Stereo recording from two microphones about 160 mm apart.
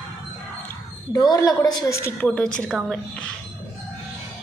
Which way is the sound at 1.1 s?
25° left (ahead or behind).